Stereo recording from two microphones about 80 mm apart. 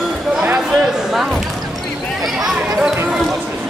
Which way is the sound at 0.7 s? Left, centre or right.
Centre.